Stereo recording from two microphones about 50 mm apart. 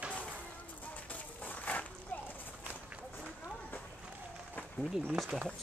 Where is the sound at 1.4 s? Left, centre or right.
Left.